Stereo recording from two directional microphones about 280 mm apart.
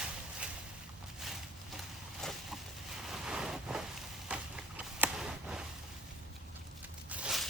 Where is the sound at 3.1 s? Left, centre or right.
Centre.